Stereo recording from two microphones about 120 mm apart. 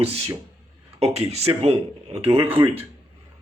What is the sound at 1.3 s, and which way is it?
Speech, 55° right (ahead or behind).